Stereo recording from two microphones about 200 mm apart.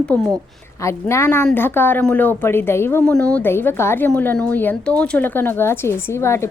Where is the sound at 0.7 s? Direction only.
15° left (ahead or behind).